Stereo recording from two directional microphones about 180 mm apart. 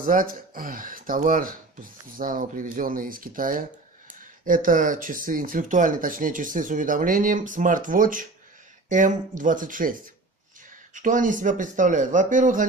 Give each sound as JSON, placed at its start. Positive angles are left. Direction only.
{"t": 0.0, "sound": "speech", "side_deg": -50}
{"t": 10.9, "sound": "speech", "side_deg": -45}